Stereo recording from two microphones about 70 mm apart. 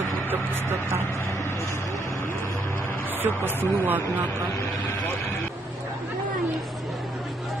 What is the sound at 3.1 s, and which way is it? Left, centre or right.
Speech, right.